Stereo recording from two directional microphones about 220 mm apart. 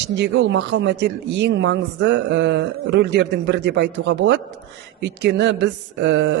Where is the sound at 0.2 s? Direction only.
50° right (ahead or behind).